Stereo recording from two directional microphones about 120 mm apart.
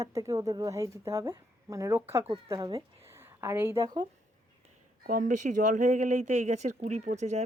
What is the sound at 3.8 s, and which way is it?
Speech, 40° right (ahead or behind).